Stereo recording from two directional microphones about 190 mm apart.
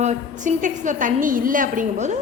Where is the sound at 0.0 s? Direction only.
40° right (ahead or behind).